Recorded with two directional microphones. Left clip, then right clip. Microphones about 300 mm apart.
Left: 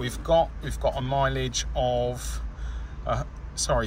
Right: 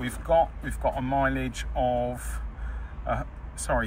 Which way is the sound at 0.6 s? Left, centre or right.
Centre.